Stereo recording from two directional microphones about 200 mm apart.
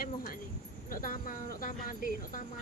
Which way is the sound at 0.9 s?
45° left (ahead or behind).